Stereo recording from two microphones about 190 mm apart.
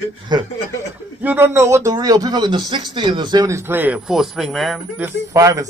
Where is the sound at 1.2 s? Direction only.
10° right (ahead or behind).